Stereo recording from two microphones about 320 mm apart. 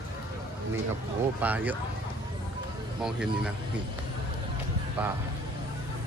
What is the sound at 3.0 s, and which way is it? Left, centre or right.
Speech, centre.